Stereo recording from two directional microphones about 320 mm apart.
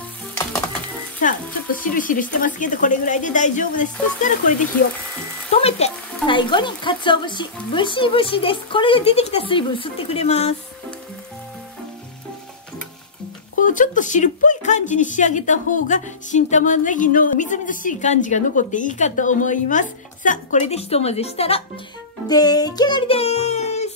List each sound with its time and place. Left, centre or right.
1.2 s a woman's voice: left
5.5 s a woman's voice: centre
13.6 s a woman's voice: left
22.3 s music: centre